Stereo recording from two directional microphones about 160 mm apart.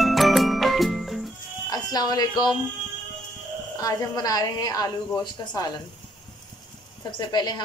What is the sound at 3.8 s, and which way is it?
A woman's voice, 25° left (ahead or behind).